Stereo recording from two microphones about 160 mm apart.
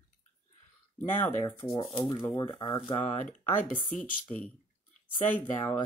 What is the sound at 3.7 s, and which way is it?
Speech, 10° left (ahead or behind).